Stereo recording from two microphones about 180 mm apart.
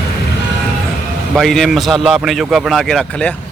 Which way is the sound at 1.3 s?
Centre (ahead or behind).